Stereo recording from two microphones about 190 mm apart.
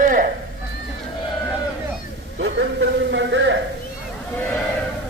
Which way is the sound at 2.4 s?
65° right (ahead or behind).